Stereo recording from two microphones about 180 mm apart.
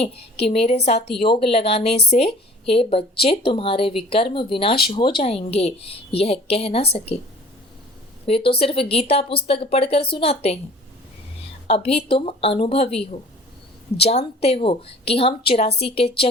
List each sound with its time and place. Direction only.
0.0 s a woman's voice: 35° left (ahead or behind)
8.3 s a woman's voice: 30° left (ahead or behind)
11.7 s a woman's voice: 35° left (ahead or behind)